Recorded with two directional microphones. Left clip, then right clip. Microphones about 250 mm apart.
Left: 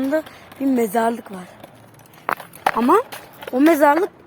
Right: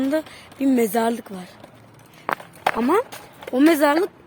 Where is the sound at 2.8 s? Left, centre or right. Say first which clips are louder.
Left 6 dB; centre.